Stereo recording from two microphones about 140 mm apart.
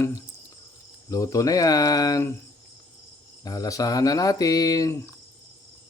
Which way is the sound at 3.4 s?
25° left (ahead or behind).